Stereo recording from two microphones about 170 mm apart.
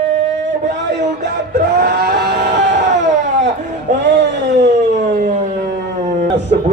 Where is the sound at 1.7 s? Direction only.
75° right (ahead or behind).